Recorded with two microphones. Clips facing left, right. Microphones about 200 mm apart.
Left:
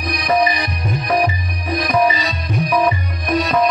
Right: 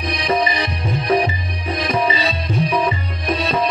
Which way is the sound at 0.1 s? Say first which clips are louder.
Left 3 dB; 25° right (ahead or behind).